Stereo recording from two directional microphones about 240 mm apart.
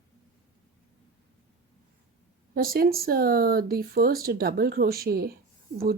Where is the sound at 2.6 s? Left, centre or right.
Right.